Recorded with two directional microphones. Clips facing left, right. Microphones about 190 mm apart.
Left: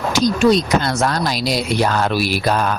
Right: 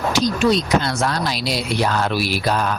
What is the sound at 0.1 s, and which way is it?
Speech, 45° left (ahead or behind).